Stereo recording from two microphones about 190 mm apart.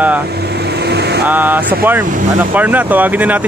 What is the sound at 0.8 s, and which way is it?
Vehicle, 60° right (ahead or behind).